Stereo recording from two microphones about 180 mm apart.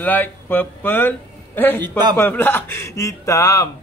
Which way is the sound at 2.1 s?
10° left (ahead or behind).